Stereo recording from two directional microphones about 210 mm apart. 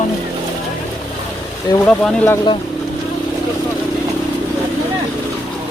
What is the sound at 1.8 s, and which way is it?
Speech, 5° left (ahead or behind).